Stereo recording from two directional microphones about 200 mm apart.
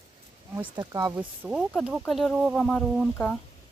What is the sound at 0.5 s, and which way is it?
Speech, 15° right (ahead or behind).